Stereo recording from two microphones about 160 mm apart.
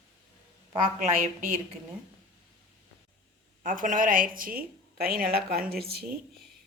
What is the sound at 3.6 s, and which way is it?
A woman's voice, 55° right (ahead or behind).